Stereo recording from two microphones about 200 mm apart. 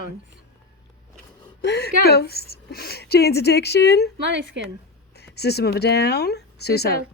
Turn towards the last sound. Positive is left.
turn(degrees=55)  # may be behind; listen again after turning